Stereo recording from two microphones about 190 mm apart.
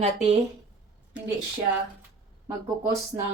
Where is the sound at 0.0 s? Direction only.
30° right (ahead or behind).